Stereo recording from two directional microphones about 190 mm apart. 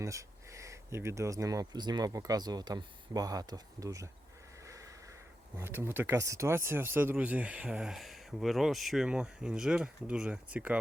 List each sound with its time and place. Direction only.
0.0 s speech: 15° right (ahead or behind)
4.6 s a sound: 15° right (ahead or behind)
5.5 s speech: 10° right (ahead or behind)